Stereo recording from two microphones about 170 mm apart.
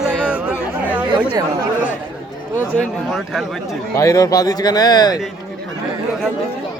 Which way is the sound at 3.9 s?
20° left (ahead or behind).